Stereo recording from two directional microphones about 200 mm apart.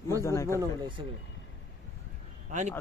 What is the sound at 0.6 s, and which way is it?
Speech, 25° right (ahead or behind).